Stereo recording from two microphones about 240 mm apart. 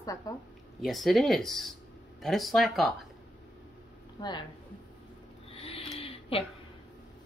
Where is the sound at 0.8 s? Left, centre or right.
Centre.